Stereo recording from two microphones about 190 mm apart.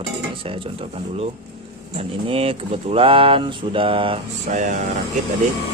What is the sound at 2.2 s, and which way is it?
Speech, 30° right (ahead or behind).